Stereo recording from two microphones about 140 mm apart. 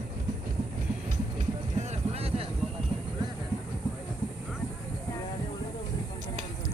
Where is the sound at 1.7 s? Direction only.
55° right (ahead or behind).